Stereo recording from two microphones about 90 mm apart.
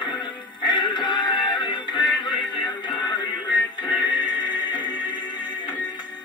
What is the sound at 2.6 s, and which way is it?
Music, 55° left (ahead or behind).